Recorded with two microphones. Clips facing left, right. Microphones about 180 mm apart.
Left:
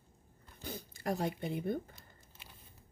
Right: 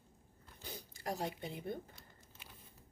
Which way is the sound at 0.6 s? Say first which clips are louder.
Left 6 dB; 55° left (ahead or behind).